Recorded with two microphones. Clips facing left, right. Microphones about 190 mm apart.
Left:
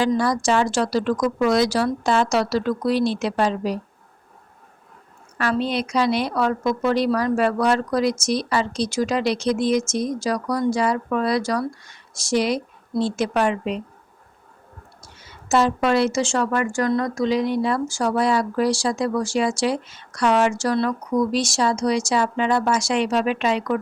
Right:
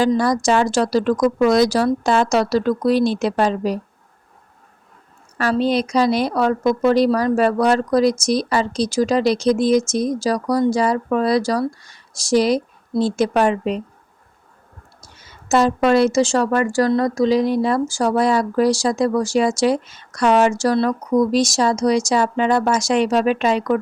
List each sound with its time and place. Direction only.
0.0 s a woman's voice: 40° right (ahead or behind)
5.4 s a woman's voice: 40° right (ahead or behind)
15.2 s a woman's voice: 45° right (ahead or behind)